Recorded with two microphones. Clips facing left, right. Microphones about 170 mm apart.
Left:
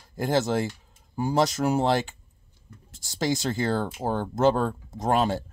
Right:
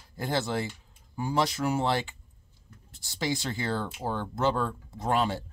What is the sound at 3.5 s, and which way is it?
Speech, 45° left (ahead or behind).